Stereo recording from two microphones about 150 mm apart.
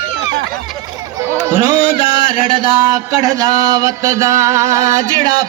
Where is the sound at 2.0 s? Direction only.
35° left (ahead or behind).